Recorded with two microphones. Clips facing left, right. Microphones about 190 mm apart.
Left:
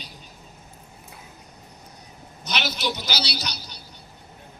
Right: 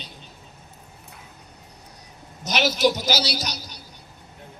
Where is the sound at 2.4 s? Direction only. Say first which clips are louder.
Right 8 dB; 45° right (ahead or behind).